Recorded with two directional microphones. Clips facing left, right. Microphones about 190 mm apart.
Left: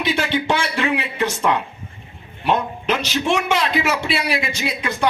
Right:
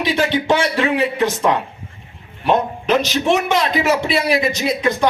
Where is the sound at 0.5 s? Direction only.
40° right (ahead or behind).